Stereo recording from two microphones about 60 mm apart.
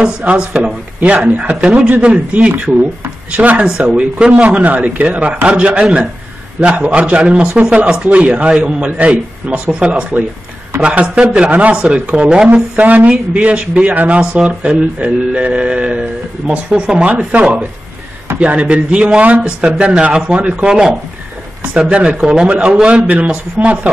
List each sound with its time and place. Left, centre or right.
0.0 s speech: centre
12.7 s speech: right